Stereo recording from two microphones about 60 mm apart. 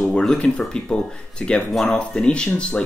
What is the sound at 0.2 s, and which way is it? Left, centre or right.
Speech, centre.